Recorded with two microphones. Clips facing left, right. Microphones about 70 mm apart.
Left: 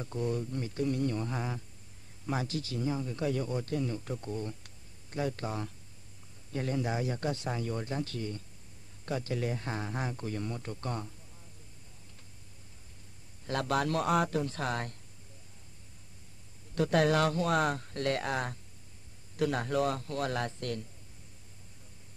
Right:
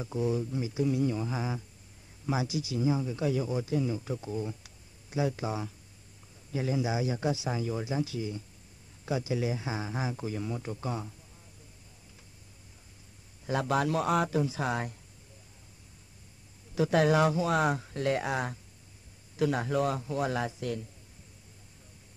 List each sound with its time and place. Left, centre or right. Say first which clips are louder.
0.0 s speech: right 3 dB; centre
13.5 s speech: right 2 dB; centre
16.7 s speech: right 2 dB; centre